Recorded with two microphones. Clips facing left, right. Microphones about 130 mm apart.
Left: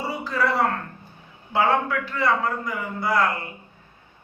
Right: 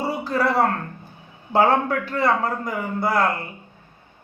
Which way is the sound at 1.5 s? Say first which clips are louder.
Right 3 dB; 40° right (ahead or behind).